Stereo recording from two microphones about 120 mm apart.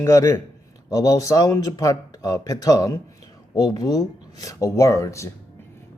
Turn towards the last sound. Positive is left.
turn(degrees=25)  # may be behind; listen again after turning